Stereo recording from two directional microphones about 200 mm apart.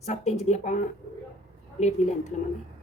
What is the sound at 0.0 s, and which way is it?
Speech, 35° left (ahead or behind).